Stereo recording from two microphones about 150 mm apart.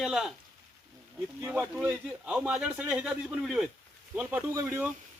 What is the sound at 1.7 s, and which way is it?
A man's voice, 10° right (ahead or behind).